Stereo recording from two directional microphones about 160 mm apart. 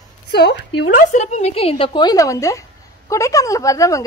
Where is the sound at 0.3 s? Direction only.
90° left.